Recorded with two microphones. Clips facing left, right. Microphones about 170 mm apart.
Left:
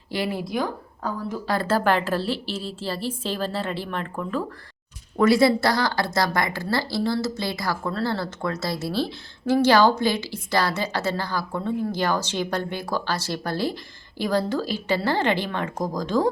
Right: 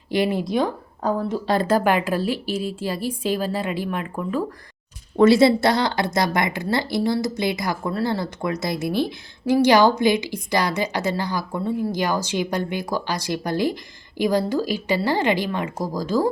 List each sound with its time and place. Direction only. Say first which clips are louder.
0.1 s a woman's voice: right 5 dB; 20° right (ahead or behind)
5.1 s a woman's voice: right 3 dB; 25° right (ahead or behind); by 16.3 s 5° right (ahead or behind)